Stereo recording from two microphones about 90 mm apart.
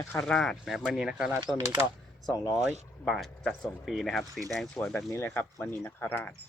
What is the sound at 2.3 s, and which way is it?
Speech, 40° left (ahead or behind).